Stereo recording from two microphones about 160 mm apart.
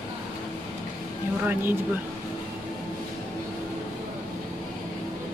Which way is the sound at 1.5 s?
10° right (ahead or behind).